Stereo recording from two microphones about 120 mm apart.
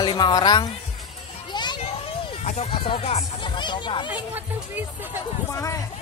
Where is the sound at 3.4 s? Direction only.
40° left (ahead or behind).